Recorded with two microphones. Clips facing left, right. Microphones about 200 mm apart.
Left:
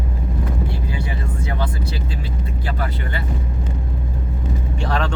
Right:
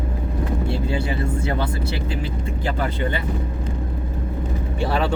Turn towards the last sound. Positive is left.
turn(degrees=-5)  # may be behind; listen again after turning